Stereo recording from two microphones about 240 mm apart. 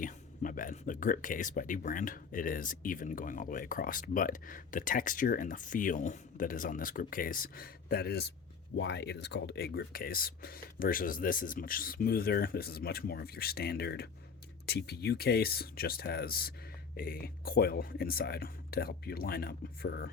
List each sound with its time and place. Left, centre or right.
0.0 s speech: left